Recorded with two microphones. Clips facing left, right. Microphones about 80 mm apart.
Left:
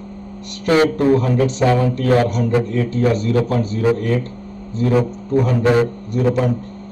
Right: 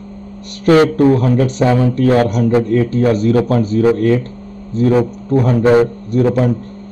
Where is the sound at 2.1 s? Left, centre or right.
Right.